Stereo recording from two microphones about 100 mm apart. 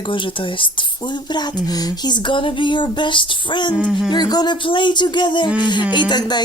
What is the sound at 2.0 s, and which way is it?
Speech, 55° left (ahead or behind).